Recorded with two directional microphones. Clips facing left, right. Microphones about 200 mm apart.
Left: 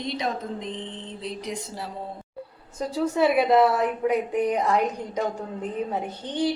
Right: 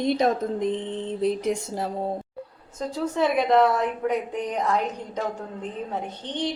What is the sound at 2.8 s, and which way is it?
A woman's voice, 10° left (ahead or behind).